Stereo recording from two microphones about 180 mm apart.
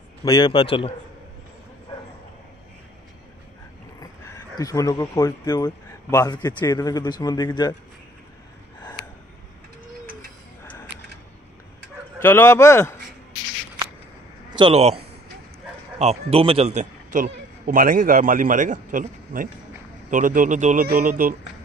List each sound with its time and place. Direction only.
0.2 s speech: 20° left (ahead or behind)
4.6 s speech: 20° left (ahead or behind)
10.6 s a sound: 15° left (ahead or behind)
12.2 s speech: 15° left (ahead or behind)
14.5 s a man's voice: 30° right (ahead or behind)
16.0 s a man's voice: 35° right (ahead or behind)